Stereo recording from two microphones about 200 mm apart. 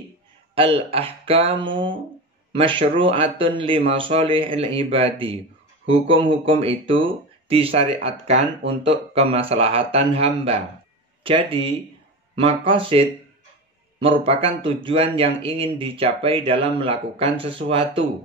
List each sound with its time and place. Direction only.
0.6 s speech: 30° right (ahead or behind)